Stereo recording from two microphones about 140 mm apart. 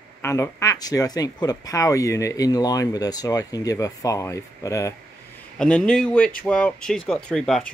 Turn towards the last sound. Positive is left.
turn(degrees=5)  # may be behind; listen again after turning